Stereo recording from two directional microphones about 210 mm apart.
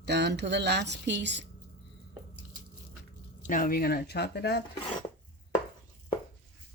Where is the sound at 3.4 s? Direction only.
40° left (ahead or behind).